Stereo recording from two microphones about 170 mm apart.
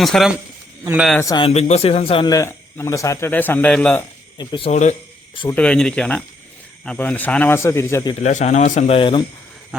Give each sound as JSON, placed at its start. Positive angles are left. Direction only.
{"t": 0.0, "sound": "speech", "side_deg": 0}
{"t": 1.2, "sound": "speech", "side_deg": 20}
{"t": 1.5, "sound": "a man's voice", "side_deg": 40}
{"t": 2.3, "sound": "speech", "side_deg": 15}
{"t": 4.4, "sound": "speech", "side_deg": 30}
{"t": 4.7, "sound": "a man's voice", "side_deg": 45}
{"t": 5.5, "sound": "speech", "side_deg": 5}
{"t": 8.2, "sound": "a man's voice", "side_deg": 45}
{"t": 9.0, "sound": "speech", "side_deg": 30}